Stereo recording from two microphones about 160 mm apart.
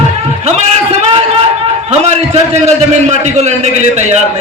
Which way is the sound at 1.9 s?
45° right (ahead or behind).